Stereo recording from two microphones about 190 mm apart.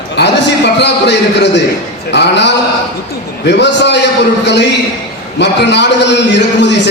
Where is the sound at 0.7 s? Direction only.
65° left (ahead or behind).